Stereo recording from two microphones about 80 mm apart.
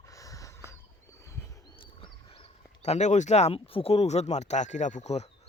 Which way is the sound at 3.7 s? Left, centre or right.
Left.